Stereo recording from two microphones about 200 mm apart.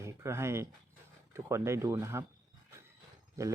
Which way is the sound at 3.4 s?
15° right (ahead or behind).